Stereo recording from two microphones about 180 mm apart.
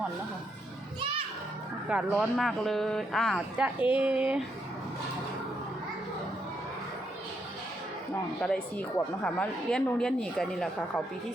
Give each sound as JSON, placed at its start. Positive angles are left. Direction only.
{"t": 0.9, "sound": "children playing", "side_deg": -30}
{"t": 1.9, "sound": "a woman's voice", "side_deg": -5}
{"t": 8.4, "sound": "a woman's voice", "side_deg": 5}